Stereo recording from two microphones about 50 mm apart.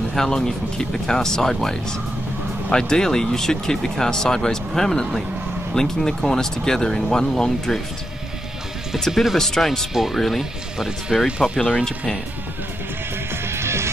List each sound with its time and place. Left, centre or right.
0.1 s speech: centre
9.1 s speech: centre
11.2 s speech: centre
13.5 s music: right